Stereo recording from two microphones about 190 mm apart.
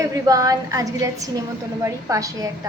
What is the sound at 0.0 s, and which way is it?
A woman's voice, 15° right (ahead or behind).